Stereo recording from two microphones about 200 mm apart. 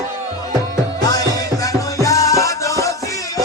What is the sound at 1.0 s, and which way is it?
Music, 20° left (ahead or behind).